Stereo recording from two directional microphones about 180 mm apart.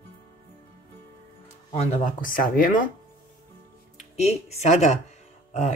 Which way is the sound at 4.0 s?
35° left (ahead or behind).